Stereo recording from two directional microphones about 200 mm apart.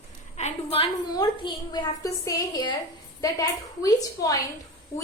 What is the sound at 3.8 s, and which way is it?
Speech, 15° left (ahead or behind).